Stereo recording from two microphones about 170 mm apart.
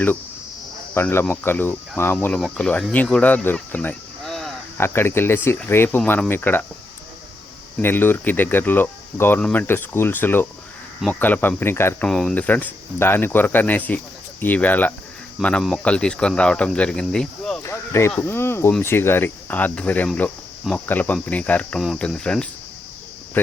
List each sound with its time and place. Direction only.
0.9 s speech: 10° left (ahead or behind)
4.8 s speech: 15° left (ahead or behind)
7.8 s speech: 10° left (ahead or behind)
12.0 s speech: 5° left (ahead or behind)
17.6 s a sound: 15° left (ahead or behind)
18.3 s speech: 15° left (ahead or behind)